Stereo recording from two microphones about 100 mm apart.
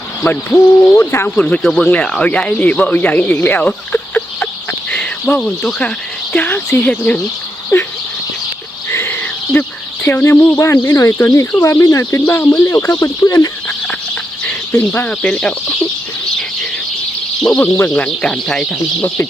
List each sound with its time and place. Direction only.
0.3 s speech: 20° left (ahead or behind)
1.6 s speech: 5° left (ahead or behind)
6.3 s a sound: 20° left (ahead or behind)
6.7 s speech: 15° left (ahead or behind)
7.7 s speech: 30° left (ahead or behind)
8.9 s a sound: 25° left (ahead or behind)
9.5 s speech: 20° left (ahead or behind); by 13.5 s 35° left (ahead or behind)
14.4 s speech: 20° left (ahead or behind)
17.6 s speech: 25° left (ahead or behind)
17.9 s speech: 10° left (ahead or behind)
19.0 s speech: 25° left (ahead or behind)